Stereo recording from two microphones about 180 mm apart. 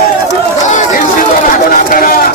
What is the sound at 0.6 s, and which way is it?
Speech, 45° left (ahead or behind).